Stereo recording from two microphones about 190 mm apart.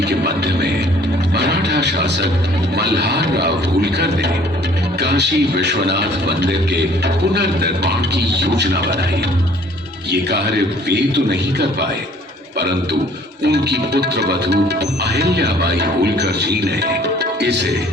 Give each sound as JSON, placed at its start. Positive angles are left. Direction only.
{"t": 0.0, "sound": "speech", "side_deg": -60}
{"t": 1.4, "sound": "music", "side_deg": -60}
{"t": 2.7, "sound": "speech", "side_deg": -60}
{"t": 10.1, "sound": "speech", "side_deg": -60}
{"t": 12.5, "sound": "a man's voice", "side_deg": -60}